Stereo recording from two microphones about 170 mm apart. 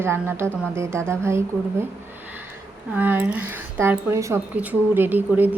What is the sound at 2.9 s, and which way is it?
Speech, 10° right (ahead or behind).